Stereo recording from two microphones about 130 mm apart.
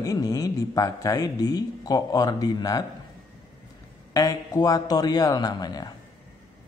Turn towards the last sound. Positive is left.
turn(degrees=30)  # may be behind; listen again after turning